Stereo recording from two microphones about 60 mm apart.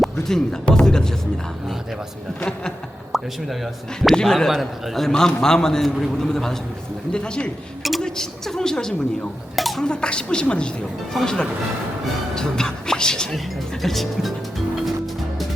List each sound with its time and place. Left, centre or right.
0.0 s speech: centre
2.4 s a man's voice: centre
3.1 s a sound: centre
4.1 s a man's voice: centre
7.8 s a sound: centre
8.0 s a man's voice: centre
9.6 s a sound: centre
9.8 s a man's voice: centre
11.1 s speech: centre